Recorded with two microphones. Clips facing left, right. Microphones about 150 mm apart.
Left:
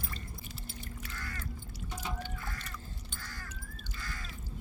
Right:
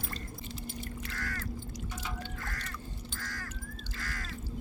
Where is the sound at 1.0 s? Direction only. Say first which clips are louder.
Right 4 dB; 80° right.